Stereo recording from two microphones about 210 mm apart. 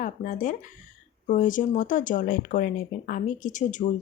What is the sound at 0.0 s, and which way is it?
Speech, 40° left (ahead or behind).